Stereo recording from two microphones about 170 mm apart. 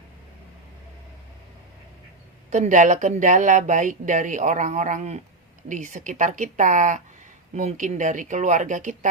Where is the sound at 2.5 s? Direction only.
45° right (ahead or behind).